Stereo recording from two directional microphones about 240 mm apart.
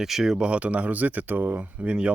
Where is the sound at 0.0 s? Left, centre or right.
Centre.